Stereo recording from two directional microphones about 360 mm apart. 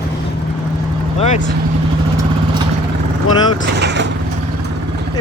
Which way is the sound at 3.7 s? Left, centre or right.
Right.